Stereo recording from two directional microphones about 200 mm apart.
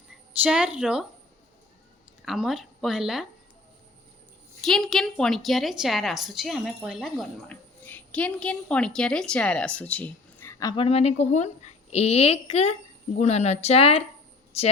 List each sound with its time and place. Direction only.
0.4 s a woman's voice: 5° right (ahead or behind)
2.2 s a woman's voice: centre (ahead or behind)
4.6 s a woman's voice: centre (ahead or behind); by 14.7 s 30° left (ahead or behind)